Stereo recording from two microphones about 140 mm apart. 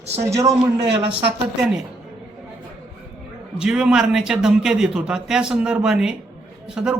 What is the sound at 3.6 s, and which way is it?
A man's voice, 5° right (ahead or behind).